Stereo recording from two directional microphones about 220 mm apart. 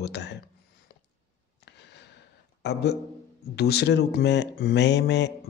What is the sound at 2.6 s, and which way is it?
Speech, 50° left (ahead or behind).